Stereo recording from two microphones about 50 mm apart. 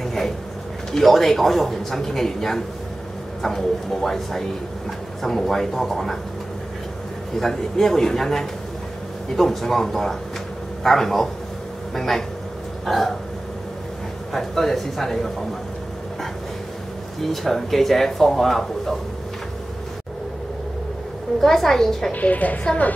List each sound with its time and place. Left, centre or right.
0.0 s a sound: centre
0.9 s a man's voice: centre
7.3 s a man's voice: centre
12.8 s hiccup: centre
14.3 s a man's voice: centre
17.2 s speech: centre
21.4 s speech: centre
22.1 s a woman's voice: left